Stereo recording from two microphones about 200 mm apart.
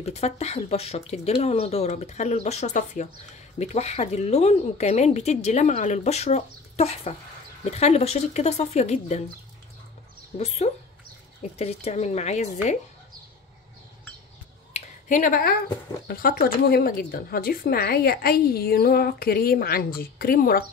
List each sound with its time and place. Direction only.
0.0 s speech: 30° left (ahead or behind)
10.3 s speech: 30° left (ahead or behind)
14.7 s a sound: 40° left (ahead or behind)
16.1 s a woman's voice: 45° left (ahead or behind)